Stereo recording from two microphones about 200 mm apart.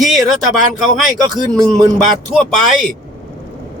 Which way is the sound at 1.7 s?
Centre (ahead or behind).